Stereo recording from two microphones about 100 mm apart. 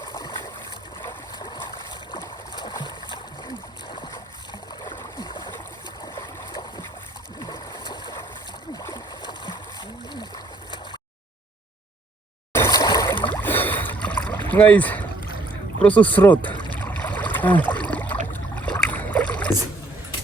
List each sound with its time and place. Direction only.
0.0 s a sound: 45° left (ahead or behind)
1.4 s stream: 45° left (ahead or behind)
2.1 s splash: 40° left (ahead or behind)
3.9 s boat: 50° left (ahead or behind)
8.8 s a sound: 45° left (ahead or behind)
10.1 s splash: 45° left (ahead or behind)
12.7 s a sound: 40° left (ahead or behind)
13.1 s boat: 50° left (ahead or behind)
13.4 s boat: 20° left (ahead or behind)
15.8 s speech: 15° left (ahead or behind)
16.8 s a sound: 15° left (ahead or behind)
18.9 s boat: 15° left (ahead or behind)